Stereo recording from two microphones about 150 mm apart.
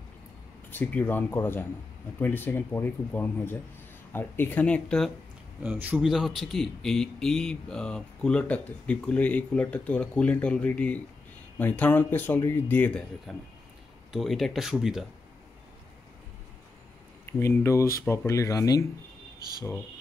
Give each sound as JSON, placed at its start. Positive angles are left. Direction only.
{"t": 0.7, "sound": "speech", "side_deg": 10}
{"t": 5.6, "sound": "speech", "side_deg": -10}
{"t": 17.3, "sound": "speech", "side_deg": 15}